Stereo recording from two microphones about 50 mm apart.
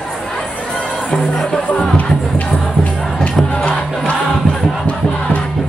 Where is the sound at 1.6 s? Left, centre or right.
Left.